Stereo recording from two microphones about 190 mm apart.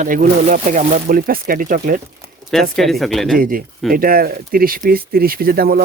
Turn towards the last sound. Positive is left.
turn(degrees=-50)  # may be behind; listen again after turning